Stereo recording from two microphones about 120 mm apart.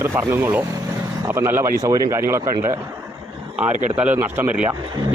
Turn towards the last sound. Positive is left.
turn(degrees=-15)  # may be behind; listen again after turning